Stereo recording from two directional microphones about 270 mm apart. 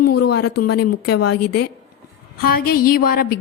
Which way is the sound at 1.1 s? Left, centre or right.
Left.